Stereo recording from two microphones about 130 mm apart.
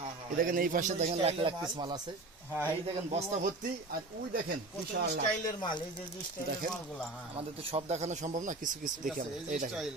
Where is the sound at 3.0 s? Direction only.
55° right (ahead or behind).